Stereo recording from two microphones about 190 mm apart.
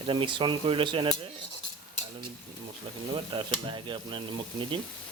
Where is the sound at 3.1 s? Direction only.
25° right (ahead or behind).